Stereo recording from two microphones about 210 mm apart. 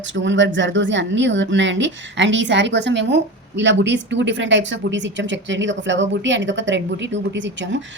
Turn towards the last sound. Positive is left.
turn(degrees=-60)  # may be behind; listen again after turning